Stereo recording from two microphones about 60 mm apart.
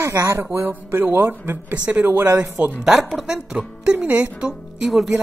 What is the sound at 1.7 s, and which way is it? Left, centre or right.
Speech, right.